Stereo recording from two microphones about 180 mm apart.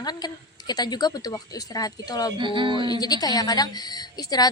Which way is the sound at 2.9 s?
20° left (ahead or behind).